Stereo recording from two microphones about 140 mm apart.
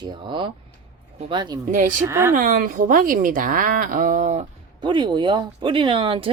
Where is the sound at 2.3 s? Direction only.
75° right (ahead or behind).